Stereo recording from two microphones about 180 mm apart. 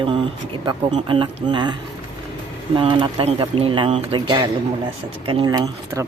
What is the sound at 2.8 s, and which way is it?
Speech, 25° right (ahead or behind).